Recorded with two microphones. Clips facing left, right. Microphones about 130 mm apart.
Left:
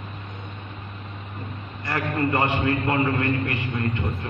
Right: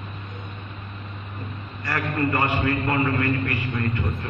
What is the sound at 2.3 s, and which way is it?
Speech, 20° left (ahead or behind).